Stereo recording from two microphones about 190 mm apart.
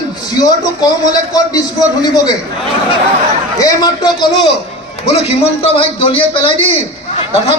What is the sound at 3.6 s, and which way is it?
Speech, 20° left (ahead or behind).